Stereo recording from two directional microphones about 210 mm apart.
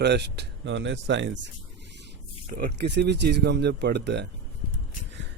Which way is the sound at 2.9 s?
55° right (ahead or behind).